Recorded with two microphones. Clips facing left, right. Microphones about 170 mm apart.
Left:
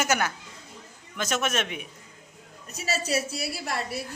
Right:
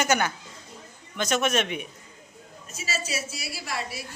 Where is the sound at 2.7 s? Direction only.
60° left (ahead or behind).